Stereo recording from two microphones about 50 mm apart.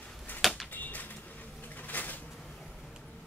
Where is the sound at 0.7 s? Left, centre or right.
Left.